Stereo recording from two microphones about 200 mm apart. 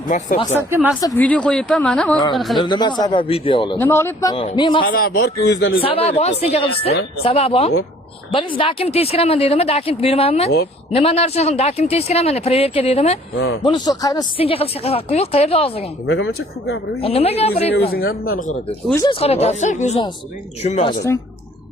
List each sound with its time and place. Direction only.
0.1 s speech: 40° left (ahead or behind)
0.5 s speech: 10° right (ahead or behind)
1.0 s speech: 10° left (ahead or behind)
2.6 s speech: 20° left (ahead or behind)
3.8 s speech: 15° left (ahead or behind)
4.4 s speech: 25° left (ahead or behind)
4.8 s a man's voice: 50° left (ahead or behind)
5.8 s speech: 30° left (ahead or behind)
16.0 s speech: 60° left (ahead or behind)
17.0 s speech: 30° left (ahead or behind)
17.7 s a man's voice: 50° left (ahead or behind)
19.0 s speech: 30° left (ahead or behind)